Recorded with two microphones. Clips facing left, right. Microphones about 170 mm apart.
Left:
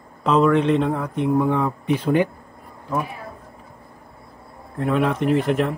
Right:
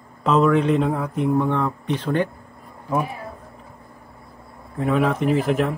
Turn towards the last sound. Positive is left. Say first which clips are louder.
# even
turn(degrees=0)  # may be behind; listen again after turning